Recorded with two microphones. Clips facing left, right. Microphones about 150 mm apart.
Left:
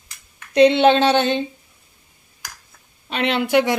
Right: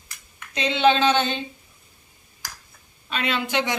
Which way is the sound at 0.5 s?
65° left (ahead or behind).